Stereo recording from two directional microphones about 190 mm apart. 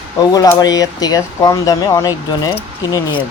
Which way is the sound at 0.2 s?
20° left (ahead or behind).